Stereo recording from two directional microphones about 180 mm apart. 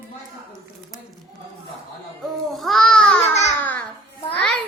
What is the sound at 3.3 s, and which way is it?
Babbling, 40° left (ahead or behind).